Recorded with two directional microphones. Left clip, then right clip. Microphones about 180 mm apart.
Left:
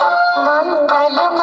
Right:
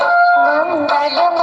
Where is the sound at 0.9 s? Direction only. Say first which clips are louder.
Even; 10° right (ahead or behind).